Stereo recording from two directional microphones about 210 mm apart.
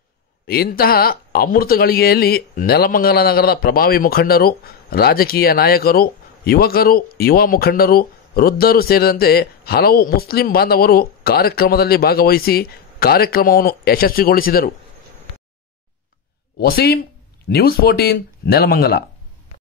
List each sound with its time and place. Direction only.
0.5 s speech: 45° left (ahead or behind)
16.5 s speech: 50° left (ahead or behind)